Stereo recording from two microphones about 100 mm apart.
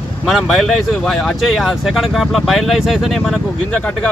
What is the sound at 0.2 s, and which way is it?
Speech, centre (ahead or behind).